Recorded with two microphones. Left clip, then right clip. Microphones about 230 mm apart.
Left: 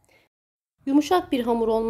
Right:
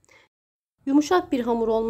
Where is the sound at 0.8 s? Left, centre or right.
Centre.